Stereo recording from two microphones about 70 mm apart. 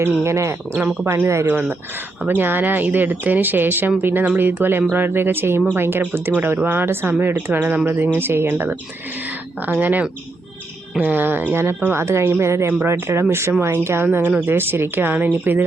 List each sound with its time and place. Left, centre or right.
0.0 s speech: right